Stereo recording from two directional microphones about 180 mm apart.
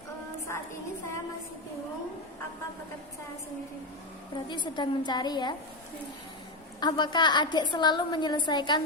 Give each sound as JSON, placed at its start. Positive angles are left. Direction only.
{"t": 0.5, "sound": "a sound", "side_deg": 15}
{"t": 4.4, "sound": "a woman's voice", "side_deg": 25}
{"t": 6.7, "sound": "a woman's voice", "side_deg": 25}